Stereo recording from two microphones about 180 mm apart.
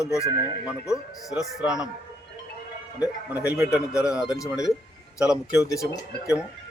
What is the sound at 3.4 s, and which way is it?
A man's voice, 10° right (ahead or behind).